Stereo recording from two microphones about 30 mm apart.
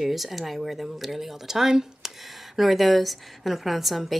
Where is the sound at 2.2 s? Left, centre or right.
Centre.